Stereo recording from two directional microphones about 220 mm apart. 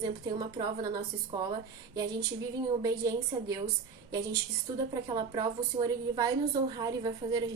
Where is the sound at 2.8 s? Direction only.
15° right (ahead or behind).